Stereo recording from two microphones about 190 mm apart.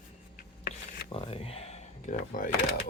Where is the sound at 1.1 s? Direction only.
30° left (ahead or behind).